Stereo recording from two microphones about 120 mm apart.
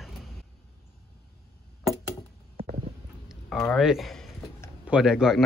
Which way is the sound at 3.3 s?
5° left (ahead or behind).